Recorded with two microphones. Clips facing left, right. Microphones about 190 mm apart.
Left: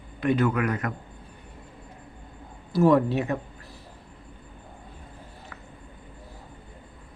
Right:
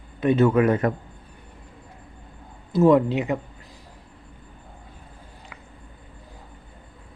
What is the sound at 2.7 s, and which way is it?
Speech, 20° right (ahead or behind).